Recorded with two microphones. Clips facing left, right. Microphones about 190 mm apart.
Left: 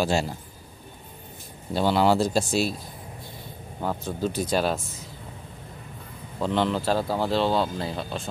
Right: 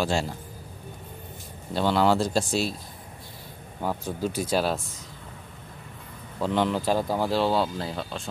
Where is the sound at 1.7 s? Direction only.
10° left (ahead or behind).